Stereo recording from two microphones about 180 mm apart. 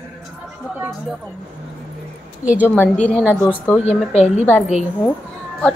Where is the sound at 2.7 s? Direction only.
10° left (ahead or behind).